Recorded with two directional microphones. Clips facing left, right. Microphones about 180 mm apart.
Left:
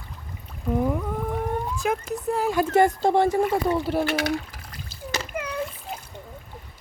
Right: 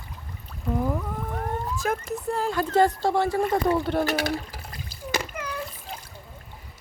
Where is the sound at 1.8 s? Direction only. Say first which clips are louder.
Left 1 dB; centre (ahead or behind); by 3.2 s 20° left (ahead or behind).